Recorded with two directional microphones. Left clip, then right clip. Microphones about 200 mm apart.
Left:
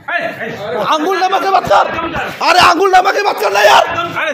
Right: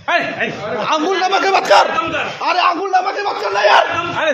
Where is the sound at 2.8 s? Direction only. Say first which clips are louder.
Left 7 dB; 55° left (ahead or behind).